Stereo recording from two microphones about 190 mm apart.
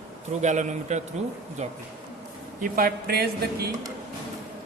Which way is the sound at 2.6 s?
50° right (ahead or behind).